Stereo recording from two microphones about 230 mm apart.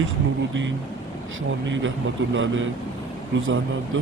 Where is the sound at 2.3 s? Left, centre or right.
Right.